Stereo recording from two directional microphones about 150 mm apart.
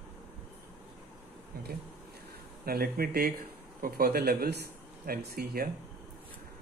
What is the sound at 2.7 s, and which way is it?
Speech, 85° right.